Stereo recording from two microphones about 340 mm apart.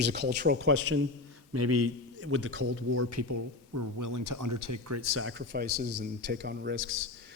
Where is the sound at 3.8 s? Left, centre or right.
Right.